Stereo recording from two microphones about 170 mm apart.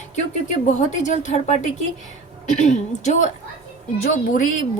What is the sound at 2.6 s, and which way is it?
A woman's voice, 45° left (ahead or behind).